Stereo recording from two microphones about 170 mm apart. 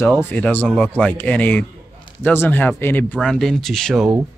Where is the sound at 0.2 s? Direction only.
10° left (ahead or behind).